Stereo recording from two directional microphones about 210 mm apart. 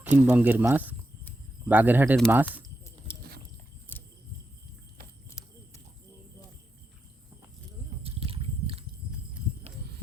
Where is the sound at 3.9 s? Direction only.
10° left (ahead or behind).